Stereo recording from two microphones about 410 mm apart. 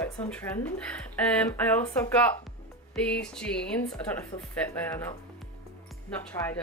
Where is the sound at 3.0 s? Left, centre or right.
Centre.